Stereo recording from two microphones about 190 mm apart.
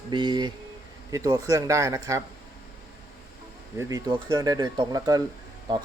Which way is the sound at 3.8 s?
20° right (ahead or behind).